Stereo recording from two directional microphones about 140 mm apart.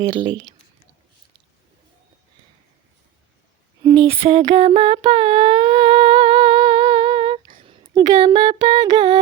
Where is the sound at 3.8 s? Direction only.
30° right (ahead or behind).